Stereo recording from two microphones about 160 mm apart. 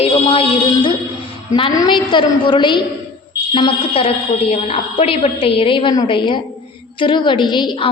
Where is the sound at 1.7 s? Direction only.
25° left (ahead or behind).